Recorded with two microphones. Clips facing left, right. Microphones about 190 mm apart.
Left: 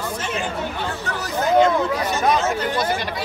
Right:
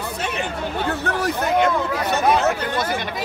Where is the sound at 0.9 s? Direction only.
60° right (ahead or behind).